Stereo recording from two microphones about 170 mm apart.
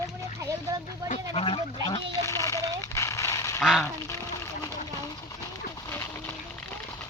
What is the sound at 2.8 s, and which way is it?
Honk, 20° left (ahead or behind).